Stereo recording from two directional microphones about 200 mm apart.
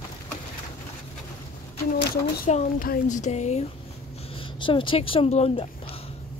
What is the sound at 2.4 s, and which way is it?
Speech, 40° left (ahead or behind).